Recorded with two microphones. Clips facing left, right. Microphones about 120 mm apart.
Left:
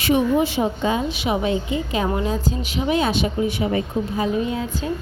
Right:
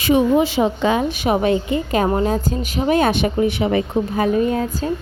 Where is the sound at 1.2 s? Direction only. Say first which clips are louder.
Right 4 dB; 55° right (ahead or behind).